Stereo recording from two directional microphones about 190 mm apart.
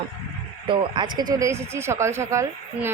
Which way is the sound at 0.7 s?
25° right (ahead or behind).